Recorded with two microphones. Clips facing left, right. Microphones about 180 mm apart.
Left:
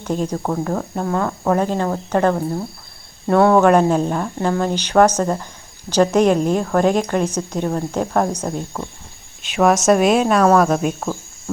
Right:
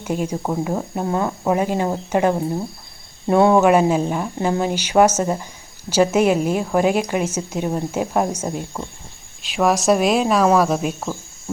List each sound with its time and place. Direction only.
0.0 s a woman's voice: 10° right (ahead or behind)
3.6 s a woman's voice: 5° right (ahead or behind)